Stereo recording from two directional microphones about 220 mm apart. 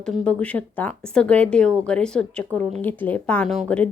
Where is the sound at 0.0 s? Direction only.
5° left (ahead or behind).